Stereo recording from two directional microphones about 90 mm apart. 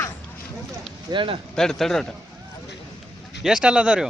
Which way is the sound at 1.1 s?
65° right (ahead or behind).